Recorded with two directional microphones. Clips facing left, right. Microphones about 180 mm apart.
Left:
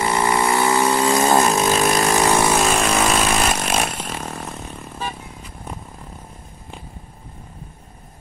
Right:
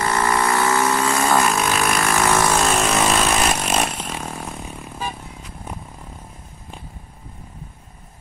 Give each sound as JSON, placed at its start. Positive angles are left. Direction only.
{"t": 0.0, "sound": "vehicle", "side_deg": 15}
{"t": 2.1, "sound": "vehicle", "side_deg": 20}
{"t": 2.6, "sound": "vehicle", "side_deg": 0}